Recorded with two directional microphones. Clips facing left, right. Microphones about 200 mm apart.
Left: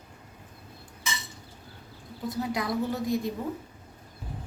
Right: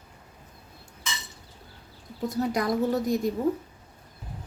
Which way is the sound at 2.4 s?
45° right (ahead or behind).